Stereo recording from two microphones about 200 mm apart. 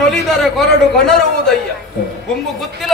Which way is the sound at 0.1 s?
Centre (ahead or behind).